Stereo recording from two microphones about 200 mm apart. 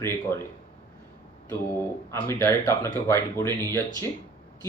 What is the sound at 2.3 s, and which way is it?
Speech, 15° left (ahead or behind).